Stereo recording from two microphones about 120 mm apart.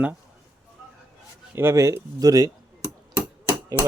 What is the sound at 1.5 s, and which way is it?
Speech, 25° right (ahead or behind).